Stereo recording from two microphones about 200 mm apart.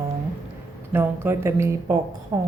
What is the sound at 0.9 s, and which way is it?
Speech, 10° right (ahead or behind).